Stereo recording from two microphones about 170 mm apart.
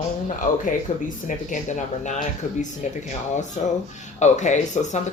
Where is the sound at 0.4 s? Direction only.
45° left (ahead or behind).